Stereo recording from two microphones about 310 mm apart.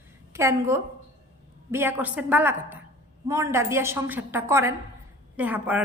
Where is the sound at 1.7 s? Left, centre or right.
Centre.